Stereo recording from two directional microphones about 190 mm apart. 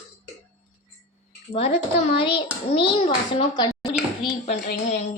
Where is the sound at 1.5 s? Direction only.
30° left (ahead or behind).